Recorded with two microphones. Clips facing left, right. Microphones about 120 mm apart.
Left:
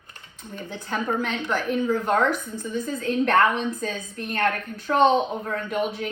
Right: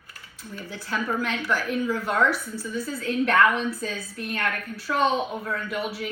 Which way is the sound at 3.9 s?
20° left (ahead or behind).